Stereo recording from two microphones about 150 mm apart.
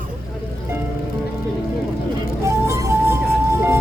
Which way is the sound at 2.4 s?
20° right (ahead or behind).